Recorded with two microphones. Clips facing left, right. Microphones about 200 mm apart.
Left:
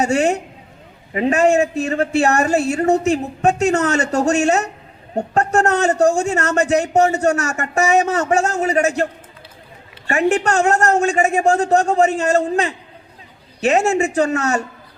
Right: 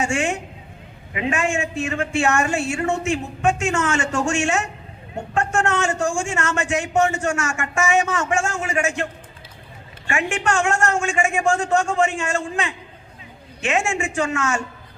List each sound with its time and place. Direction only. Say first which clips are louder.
0.0 s a man's voice: left 6 dB; 40° left (ahead or behind)
10.1 s a man's voice: left 6 dB; 40° left (ahead or behind)